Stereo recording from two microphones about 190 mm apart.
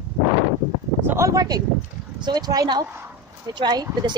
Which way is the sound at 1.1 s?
15° right (ahead or behind).